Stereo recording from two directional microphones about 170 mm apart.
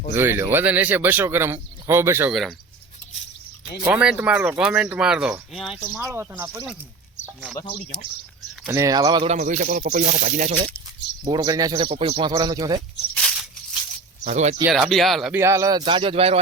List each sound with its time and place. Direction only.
0.1 s speech: 15° right (ahead or behind)
3.8 s speech: 5° right (ahead or behind)
5.8 s speech: 10° right (ahead or behind)
8.6 s speech: 15° right (ahead or behind)
9.2 s speech: 45° right (ahead or behind)
11.3 s speech: 25° right (ahead or behind)
13.1 s maraca: centre (ahead or behind)
14.3 s speech: 45° right (ahead or behind)
14.7 s speech: centre (ahead or behind)
15.4 s speech: 15° right (ahead or behind); by 16.4 s 35° right (ahead or behind)